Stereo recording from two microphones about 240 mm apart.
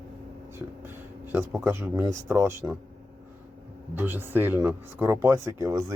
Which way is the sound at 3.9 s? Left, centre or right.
Centre.